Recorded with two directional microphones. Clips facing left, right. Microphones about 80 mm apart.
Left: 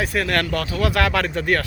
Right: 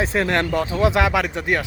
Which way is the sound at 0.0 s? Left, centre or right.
Right.